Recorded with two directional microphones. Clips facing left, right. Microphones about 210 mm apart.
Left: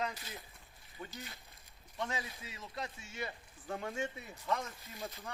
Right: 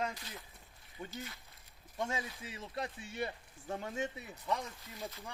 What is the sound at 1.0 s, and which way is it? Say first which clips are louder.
Speech: right 1 dB; 25° right (ahead or behind).